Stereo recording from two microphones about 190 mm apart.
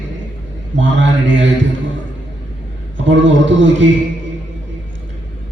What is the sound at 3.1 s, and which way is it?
Speech, 75° right (ahead or behind).